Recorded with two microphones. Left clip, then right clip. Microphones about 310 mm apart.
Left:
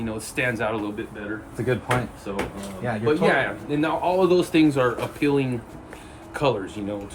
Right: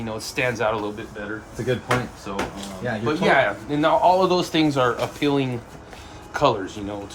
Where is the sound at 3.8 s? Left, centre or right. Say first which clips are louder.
Right 5 dB; centre.